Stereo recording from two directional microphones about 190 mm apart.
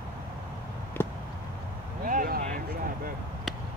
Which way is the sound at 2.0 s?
45° right (ahead or behind).